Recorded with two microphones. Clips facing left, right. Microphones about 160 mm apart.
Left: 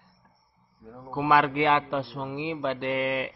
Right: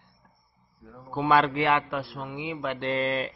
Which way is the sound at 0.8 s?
20° left (ahead or behind).